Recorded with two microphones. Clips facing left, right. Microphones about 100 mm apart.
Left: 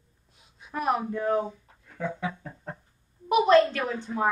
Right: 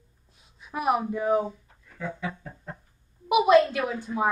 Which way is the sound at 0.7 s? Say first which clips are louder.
Right 2 dB; 10° right (ahead or behind).